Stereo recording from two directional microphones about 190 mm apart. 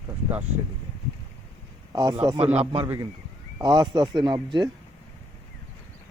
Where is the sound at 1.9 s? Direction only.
20° right (ahead or behind).